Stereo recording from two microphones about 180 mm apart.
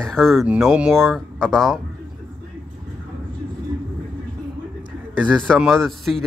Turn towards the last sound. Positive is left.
turn(degrees=0)  # may be behind; listen again after turning